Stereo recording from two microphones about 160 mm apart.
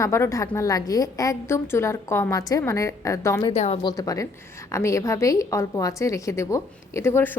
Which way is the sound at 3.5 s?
40° left (ahead or behind).